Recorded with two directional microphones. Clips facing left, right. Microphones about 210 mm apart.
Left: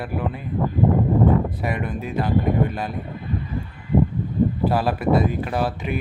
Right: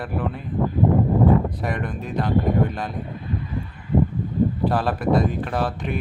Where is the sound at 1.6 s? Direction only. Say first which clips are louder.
Left 1 dB; 5° left (ahead or behind).